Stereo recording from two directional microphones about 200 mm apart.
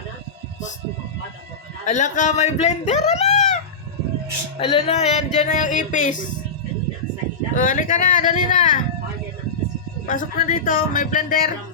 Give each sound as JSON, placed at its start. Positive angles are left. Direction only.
{"t": 1.8, "sound": "a man's voice", "side_deg": 35}
{"t": 4.6, "sound": "a man's voice", "side_deg": 30}
{"t": 7.5, "sound": "a man's voice", "side_deg": 40}
{"t": 10.1, "sound": "speech", "side_deg": 40}